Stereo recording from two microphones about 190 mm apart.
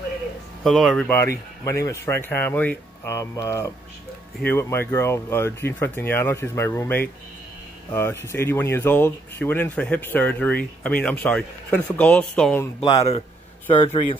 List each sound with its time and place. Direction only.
0.7 s speech: centre (ahead or behind)
1.0 s speech: 10° left (ahead or behind)
12.8 s a man's voice: 35° left (ahead or behind)